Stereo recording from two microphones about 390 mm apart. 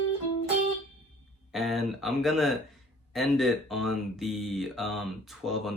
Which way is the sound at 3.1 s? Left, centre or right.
Centre.